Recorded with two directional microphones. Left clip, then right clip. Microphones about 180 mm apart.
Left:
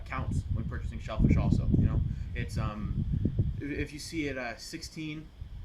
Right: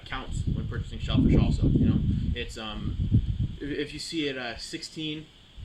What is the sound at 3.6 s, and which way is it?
Speech, 25° left (ahead or behind).